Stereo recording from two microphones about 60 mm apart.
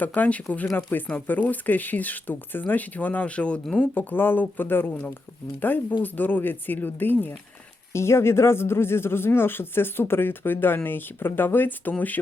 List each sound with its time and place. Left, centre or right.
0.0 s speech: left
3.8 s speech: left
7.9 s speech: left